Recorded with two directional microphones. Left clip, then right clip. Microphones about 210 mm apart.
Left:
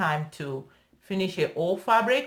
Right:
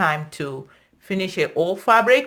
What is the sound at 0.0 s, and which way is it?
Speech, 45° right (ahead or behind).